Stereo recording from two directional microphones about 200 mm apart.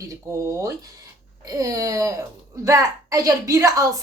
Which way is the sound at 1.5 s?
15° right (ahead or behind).